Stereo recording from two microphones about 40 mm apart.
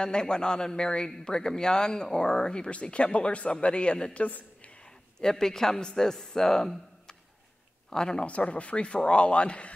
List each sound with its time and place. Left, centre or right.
0.0 s a man's voice: left
4.3 s a sound: left
5.2 s speech: centre
7.9 s speech: centre
8.3 s a man's voice: left